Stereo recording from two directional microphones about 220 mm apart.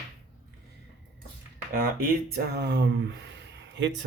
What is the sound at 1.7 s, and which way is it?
Speech, 45° right (ahead or behind).